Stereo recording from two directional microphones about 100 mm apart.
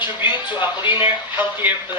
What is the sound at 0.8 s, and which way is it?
Speech, 50° left (ahead or behind).